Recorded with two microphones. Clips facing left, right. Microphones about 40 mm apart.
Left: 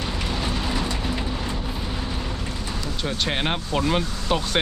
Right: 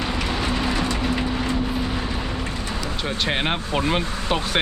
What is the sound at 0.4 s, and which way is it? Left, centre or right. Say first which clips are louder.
Vehicle: right 3 dB; right.